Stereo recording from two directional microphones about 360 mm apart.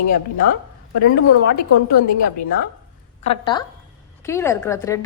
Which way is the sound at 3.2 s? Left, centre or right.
Centre.